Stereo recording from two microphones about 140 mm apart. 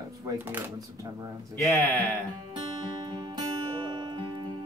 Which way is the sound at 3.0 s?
30° right (ahead or behind).